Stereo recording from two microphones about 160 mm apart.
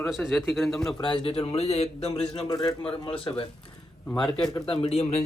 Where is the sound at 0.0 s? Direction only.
Centre (ahead or behind).